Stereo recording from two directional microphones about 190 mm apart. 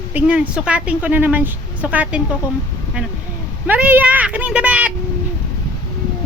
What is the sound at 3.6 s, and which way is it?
A woman's voice, 10° right (ahead or behind).